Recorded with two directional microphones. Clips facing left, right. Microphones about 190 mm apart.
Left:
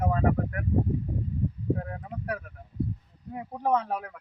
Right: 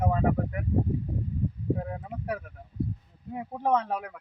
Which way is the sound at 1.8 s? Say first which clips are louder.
Right 2 dB; 15° right (ahead or behind).